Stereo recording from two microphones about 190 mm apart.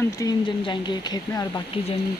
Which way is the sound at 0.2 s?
20° left (ahead or behind).